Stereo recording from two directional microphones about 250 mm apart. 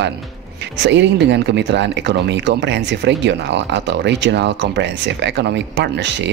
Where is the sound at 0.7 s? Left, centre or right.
Right.